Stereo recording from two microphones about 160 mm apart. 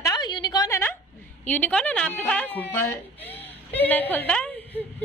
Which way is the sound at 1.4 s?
10° left (ahead or behind).